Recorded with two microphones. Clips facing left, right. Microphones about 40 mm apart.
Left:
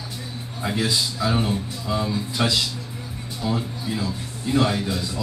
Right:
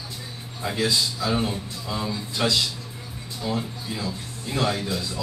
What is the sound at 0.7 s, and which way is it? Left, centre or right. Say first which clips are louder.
A man's voice: even; centre.